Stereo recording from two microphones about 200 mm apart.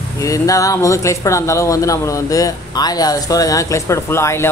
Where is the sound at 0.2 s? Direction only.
15° left (ahead or behind).